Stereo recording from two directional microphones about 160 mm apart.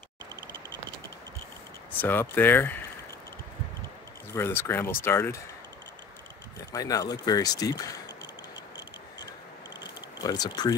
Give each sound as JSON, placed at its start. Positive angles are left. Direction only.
{"t": 2.0, "sound": "speech", "side_deg": 10}
{"t": 4.4, "sound": "speech", "side_deg": 15}
{"t": 6.7, "sound": "speech", "side_deg": 20}
{"t": 10.2, "sound": "speech", "side_deg": 25}